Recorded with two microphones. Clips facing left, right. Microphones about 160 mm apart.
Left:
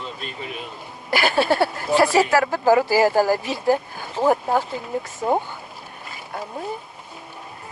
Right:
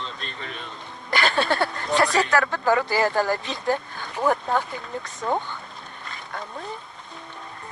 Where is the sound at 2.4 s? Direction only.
30° left (ahead or behind).